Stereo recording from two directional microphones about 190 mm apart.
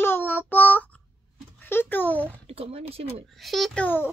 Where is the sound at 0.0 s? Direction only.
10° left (ahead or behind).